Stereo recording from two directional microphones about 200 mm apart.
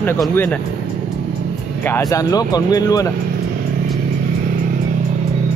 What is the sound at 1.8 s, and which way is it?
Speech, 15° left (ahead or behind).